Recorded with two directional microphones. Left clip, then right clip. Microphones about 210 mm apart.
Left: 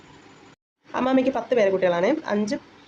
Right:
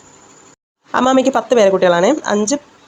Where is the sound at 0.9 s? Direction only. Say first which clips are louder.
Right 9 dB; 25° right (ahead or behind).